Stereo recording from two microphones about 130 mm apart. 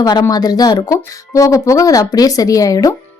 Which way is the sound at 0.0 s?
30° left (ahead or behind).